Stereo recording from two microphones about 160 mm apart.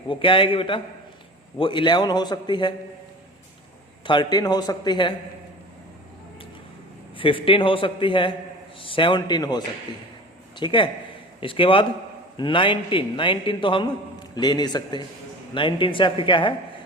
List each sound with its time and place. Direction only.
0.1 s a man's voice: 35° left (ahead or behind)
4.0 s a man's voice: 30° left (ahead or behind)
7.2 s a man's voice: 35° left (ahead or behind)